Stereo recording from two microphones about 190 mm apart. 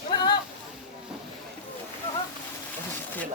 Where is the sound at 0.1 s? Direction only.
20° left (ahead or behind).